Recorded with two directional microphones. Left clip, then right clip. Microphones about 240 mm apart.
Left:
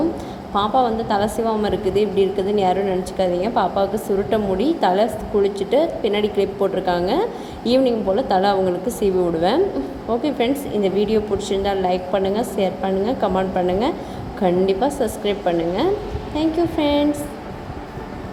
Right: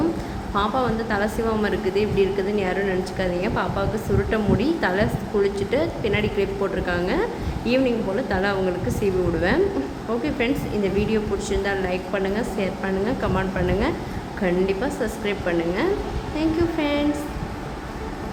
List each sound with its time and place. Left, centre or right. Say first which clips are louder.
0.5 s a woman's voice: left 5 dB; centre